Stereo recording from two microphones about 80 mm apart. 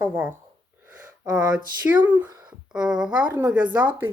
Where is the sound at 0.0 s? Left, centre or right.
Right.